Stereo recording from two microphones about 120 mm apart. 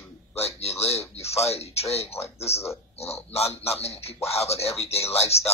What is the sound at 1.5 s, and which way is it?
Speech, 60° left (ahead or behind).